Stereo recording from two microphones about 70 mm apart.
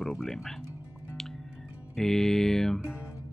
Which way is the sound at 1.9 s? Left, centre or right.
Centre.